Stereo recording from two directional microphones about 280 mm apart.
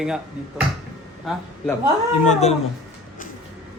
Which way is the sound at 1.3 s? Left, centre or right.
Centre.